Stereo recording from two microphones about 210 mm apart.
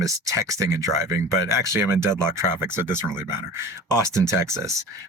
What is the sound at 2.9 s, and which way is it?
Speech, 20° left (ahead or behind).